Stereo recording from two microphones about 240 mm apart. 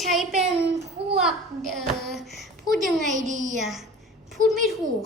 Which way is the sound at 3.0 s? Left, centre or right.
Right.